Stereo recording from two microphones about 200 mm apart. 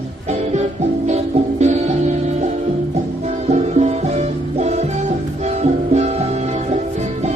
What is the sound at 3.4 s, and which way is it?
Music, 35° right (ahead or behind).